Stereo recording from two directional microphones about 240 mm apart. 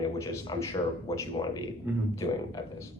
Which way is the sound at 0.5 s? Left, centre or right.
Centre.